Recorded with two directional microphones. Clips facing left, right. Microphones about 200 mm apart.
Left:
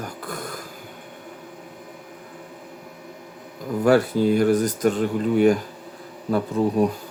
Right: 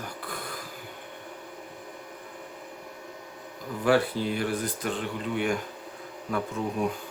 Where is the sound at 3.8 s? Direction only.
45° left (ahead or behind).